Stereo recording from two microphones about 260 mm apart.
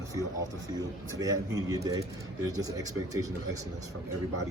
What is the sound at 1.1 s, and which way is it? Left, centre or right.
Speech, centre.